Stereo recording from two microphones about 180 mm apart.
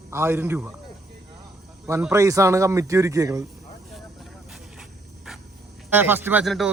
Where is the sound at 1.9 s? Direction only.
15° right (ahead or behind).